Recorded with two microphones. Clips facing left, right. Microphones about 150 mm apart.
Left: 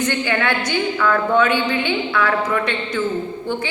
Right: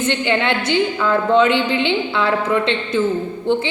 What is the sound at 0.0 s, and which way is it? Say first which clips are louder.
A woman's voice: right 2 dB; 20° right (ahead or behind).